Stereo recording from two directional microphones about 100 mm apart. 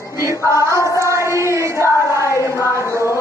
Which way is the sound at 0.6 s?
30° right (ahead or behind).